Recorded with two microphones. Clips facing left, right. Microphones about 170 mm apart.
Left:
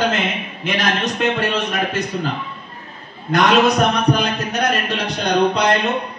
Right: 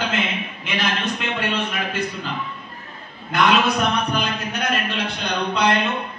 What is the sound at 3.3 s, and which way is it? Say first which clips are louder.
A man's voice: left 4 dB; 40° left (ahead or behind).